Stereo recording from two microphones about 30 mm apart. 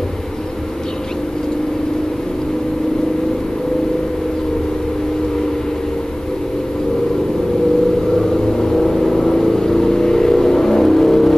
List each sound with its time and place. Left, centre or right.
8.2 s vehicle: centre